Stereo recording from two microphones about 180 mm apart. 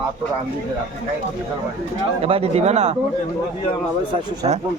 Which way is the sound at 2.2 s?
35° right (ahead or behind).